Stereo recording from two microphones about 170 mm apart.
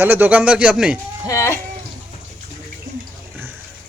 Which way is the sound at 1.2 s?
15° left (ahead or behind).